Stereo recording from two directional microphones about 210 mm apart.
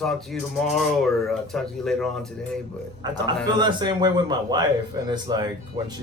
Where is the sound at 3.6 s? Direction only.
20° right (ahead or behind).